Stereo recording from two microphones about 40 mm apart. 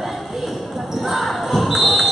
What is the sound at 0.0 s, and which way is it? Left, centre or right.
Basketball bounce, centre.